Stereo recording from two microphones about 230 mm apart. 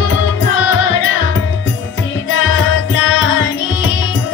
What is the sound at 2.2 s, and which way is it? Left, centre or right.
Music, left.